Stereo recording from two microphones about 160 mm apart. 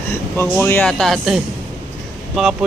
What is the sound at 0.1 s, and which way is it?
Speech, 15° left (ahead or behind).